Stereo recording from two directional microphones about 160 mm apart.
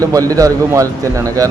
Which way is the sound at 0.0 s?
20° right (ahead or behind).